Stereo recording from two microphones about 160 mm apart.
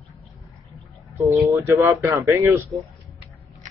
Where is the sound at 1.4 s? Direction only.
20° right (ahead or behind).